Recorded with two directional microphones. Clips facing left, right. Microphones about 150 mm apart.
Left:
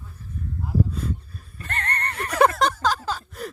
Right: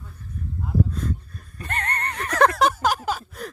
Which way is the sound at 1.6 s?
15° right (ahead or behind).